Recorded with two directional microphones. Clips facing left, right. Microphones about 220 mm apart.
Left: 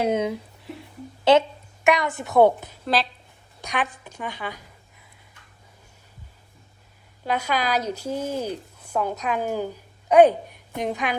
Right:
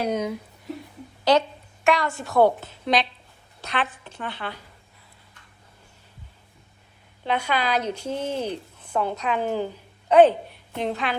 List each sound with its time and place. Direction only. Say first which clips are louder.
0.0 s a woman's voice: left 3 dB; 25° left (ahead or behind)
2.8 s speech: right 1 dB; centre (ahead or behind)
3.7 s a woman's voice: even; 10° left (ahead or behind)
7.3 s a woman's voice: even; 10° left (ahead or behind)